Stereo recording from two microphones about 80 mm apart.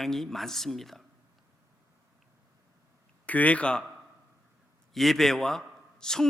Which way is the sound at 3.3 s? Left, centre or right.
Centre.